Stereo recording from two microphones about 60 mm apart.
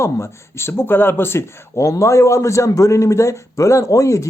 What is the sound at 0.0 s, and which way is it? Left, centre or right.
Speech, left.